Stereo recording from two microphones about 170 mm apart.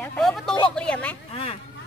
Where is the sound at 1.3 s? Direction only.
35° left (ahead or behind).